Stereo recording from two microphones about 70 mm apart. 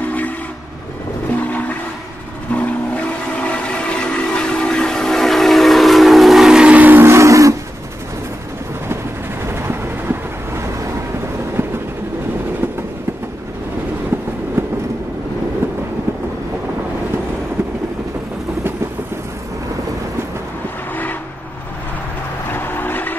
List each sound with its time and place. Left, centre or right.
1.3 s a sound: left
2.5 s train: left; by 6.8 s centre
6.8 s train: right
7.1 s a sound: right
9.4 s vehicle: right
14.1 s train: right
20.9 s vehicle: left
22.5 s vehicle: left